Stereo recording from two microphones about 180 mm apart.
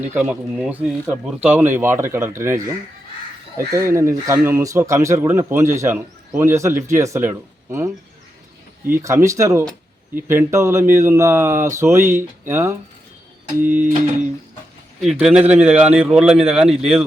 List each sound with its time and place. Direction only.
0.0 s speech: 10° right (ahead or behind)
8.9 s speech: 15° right (ahead or behind)
15.0 s speech: centre (ahead or behind)